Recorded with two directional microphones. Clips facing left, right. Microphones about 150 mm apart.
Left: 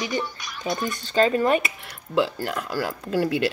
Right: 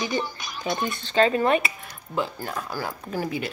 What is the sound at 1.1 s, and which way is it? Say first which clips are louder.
Speech: left 1 dB; 35° left (ahead or behind).